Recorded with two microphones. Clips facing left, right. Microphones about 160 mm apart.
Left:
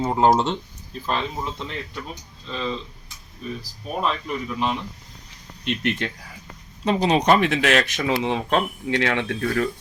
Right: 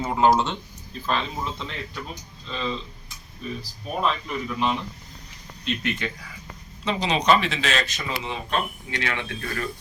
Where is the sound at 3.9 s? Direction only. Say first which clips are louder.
Left 1 dB; centre (ahead or behind).